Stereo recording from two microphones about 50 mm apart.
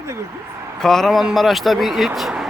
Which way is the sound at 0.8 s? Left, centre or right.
Centre.